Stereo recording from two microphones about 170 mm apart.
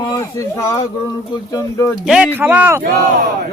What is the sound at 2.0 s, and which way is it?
Speech, 5° right (ahead or behind).